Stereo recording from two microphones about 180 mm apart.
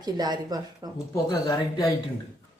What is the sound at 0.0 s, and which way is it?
Speech, 20° right (ahead or behind).